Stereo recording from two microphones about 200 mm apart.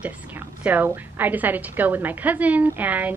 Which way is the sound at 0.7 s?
10° right (ahead or behind).